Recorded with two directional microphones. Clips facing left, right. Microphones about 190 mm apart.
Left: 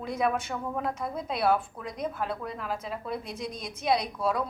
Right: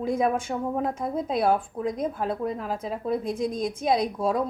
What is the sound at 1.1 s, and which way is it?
A woman's voice, 45° right (ahead or behind).